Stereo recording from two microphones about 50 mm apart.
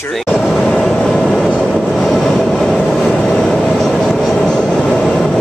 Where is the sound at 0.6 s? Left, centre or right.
Centre.